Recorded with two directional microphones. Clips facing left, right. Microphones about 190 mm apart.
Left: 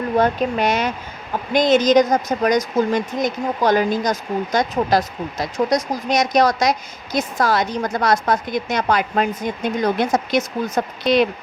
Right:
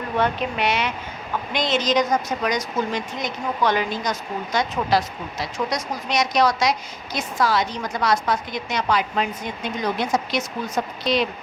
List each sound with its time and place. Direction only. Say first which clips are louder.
0.2 s speech: left 4 dB; 40° left (ahead or behind)